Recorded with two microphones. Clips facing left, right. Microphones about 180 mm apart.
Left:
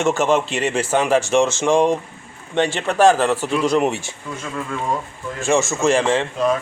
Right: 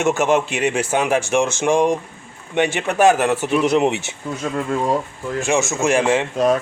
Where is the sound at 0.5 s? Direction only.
Centre (ahead or behind).